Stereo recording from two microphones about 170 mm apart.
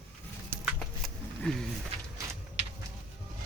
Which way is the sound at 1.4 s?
5° left (ahead or behind).